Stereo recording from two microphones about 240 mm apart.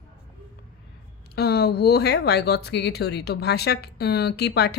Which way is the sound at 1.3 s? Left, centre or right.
Left.